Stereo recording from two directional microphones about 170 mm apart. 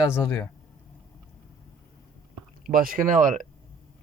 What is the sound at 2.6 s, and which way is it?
Speech, 55° right (ahead or behind).